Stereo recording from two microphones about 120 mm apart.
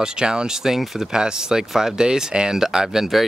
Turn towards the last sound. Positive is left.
turn(degrees=-5)  # may be behind; listen again after turning